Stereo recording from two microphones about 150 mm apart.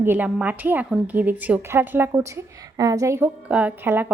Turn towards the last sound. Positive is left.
turn(degrees=-10)  # may be behind; listen again after turning